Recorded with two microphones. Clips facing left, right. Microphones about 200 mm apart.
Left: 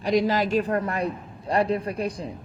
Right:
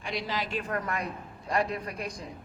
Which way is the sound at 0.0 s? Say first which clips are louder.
Left 12 dB; 45° left (ahead or behind).